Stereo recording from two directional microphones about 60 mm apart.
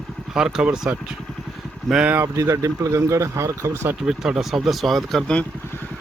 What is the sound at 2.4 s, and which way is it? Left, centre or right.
Speech, right.